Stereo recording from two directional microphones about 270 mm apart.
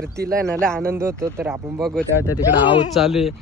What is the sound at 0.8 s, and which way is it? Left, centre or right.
Speech, centre.